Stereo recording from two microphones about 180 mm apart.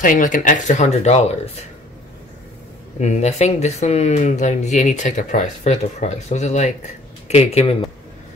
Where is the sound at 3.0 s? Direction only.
40° left (ahead or behind).